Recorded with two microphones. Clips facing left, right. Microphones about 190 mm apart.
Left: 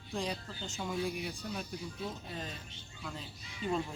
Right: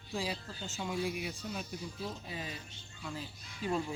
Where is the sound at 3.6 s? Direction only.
5° right (ahead or behind).